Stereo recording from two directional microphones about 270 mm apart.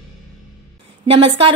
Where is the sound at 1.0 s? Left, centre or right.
Right.